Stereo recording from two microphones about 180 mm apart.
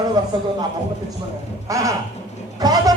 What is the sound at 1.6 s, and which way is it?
Speech, 15° right (ahead or behind).